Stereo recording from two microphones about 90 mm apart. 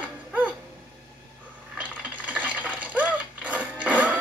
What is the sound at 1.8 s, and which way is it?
Coin, 15° right (ahead or behind).